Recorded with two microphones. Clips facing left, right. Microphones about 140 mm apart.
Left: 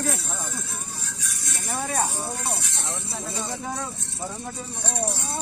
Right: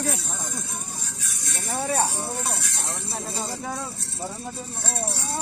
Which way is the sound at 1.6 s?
25° right (ahead or behind).